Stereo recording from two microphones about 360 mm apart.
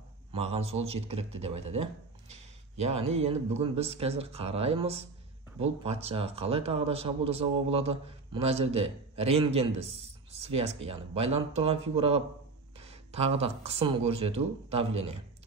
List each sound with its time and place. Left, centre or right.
0.3 s a man's voice: centre